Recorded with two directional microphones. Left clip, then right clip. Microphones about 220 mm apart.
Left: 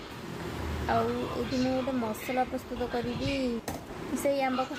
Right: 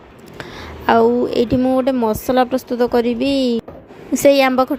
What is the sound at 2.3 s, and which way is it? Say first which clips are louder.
A woman's voice: right 13 dB; 40° right (ahead or behind).